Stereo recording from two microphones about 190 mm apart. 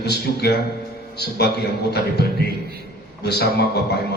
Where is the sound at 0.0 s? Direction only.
60° left (ahead or behind).